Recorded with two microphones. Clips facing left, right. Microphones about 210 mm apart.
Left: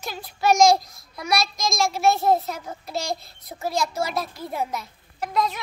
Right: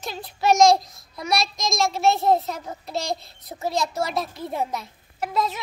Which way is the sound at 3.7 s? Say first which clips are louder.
Even; centre (ahead or behind).